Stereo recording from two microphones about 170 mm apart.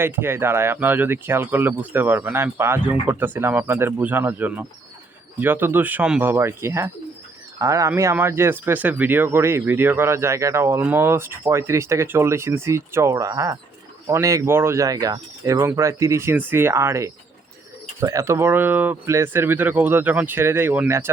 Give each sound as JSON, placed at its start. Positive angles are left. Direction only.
{"t": 0.0, "sound": "speech", "side_deg": -15}